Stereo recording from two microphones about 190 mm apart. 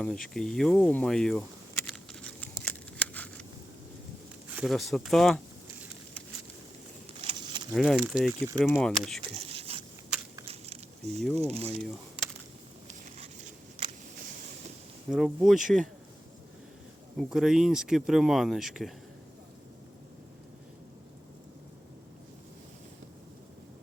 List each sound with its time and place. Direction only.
0.0 s a sound: centre (ahead or behind)
4.4 s speech: 5° right (ahead or behind)
7.2 s a sound: 25° right (ahead or behind)
7.7 s speech: centre (ahead or behind)
8.3 s speech: 20° right (ahead or behind)
8.6 s speech: centre (ahead or behind)
9.4 s a sound: 30° right (ahead or behind)
11.3 s speech: 35° right (ahead or behind)
15.1 s speech: centre (ahead or behind)
17.2 s speech: 5° right (ahead or behind)